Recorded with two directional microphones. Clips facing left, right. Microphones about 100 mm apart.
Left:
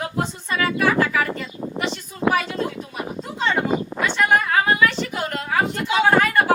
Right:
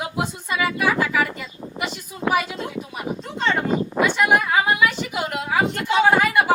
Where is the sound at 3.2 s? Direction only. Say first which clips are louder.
Left 1 dB; 5° left (ahead or behind).